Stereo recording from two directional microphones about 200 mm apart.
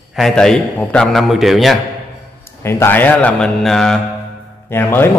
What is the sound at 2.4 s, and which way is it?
A man's voice, 10° left (ahead or behind).